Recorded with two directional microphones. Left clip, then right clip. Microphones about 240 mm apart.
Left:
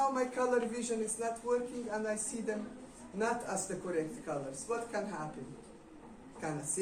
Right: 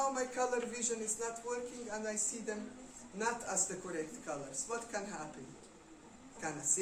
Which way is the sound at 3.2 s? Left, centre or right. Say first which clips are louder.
Left 3 dB; centre.